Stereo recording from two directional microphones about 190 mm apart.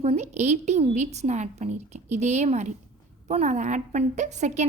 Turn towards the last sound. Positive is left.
turn(degrees=-40)  # may be behind; listen again after turning